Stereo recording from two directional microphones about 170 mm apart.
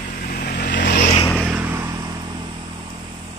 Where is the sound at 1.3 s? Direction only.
10° right (ahead or behind); by 3.0 s 25° right (ahead or behind).